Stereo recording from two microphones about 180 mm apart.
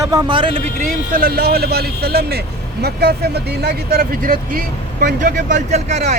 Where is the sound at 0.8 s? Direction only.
50° right (ahead or behind).